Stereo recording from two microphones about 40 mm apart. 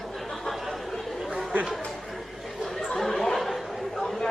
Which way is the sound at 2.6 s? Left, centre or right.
Centre.